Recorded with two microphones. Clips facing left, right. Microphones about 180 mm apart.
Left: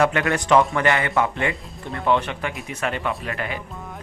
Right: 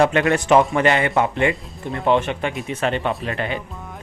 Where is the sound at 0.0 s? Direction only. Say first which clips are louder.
Right 3 dB; 20° right (ahead or behind).